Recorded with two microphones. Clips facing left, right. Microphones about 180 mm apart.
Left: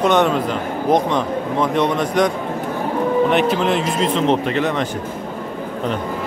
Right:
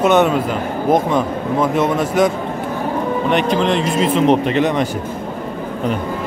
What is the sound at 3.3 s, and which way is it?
Speech, 5° left (ahead or behind).